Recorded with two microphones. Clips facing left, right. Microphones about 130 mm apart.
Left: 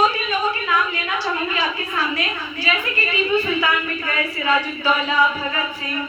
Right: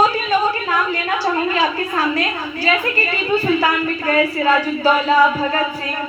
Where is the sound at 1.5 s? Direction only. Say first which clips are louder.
Right 5 dB; 40° right (ahead or behind).